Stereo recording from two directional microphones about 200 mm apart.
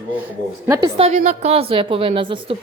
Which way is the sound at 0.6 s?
15° right (ahead or behind).